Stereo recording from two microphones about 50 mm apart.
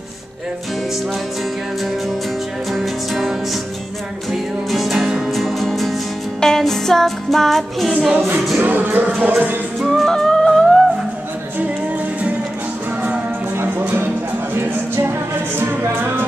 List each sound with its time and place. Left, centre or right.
2.7 s music: centre
5.3 s music: centre
8.6 s music: right
9.8 s music: centre
13.6 s music: right
14.7 s music: right